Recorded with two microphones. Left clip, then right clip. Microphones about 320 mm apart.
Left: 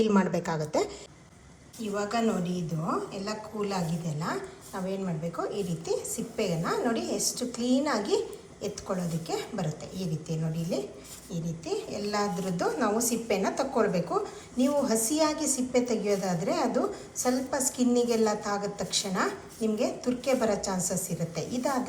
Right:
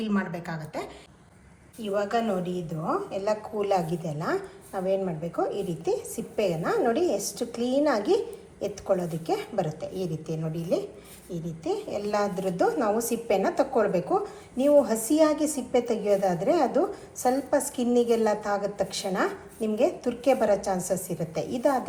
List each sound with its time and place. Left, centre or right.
0.2 s speech: centre
2.0 s a woman's voice: centre